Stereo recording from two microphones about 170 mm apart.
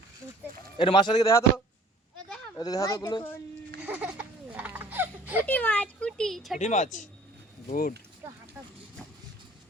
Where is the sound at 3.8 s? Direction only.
10° right (ahead or behind).